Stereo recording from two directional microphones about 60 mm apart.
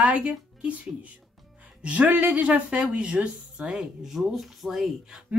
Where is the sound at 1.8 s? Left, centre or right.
Right; by 5.2 s centre.